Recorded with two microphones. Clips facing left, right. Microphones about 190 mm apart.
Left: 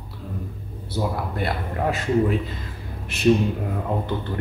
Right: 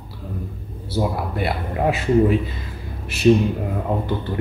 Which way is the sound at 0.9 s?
10° right (ahead or behind).